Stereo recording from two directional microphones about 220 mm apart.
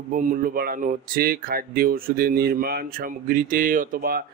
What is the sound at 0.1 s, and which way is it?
A man's voice, 35° right (ahead or behind).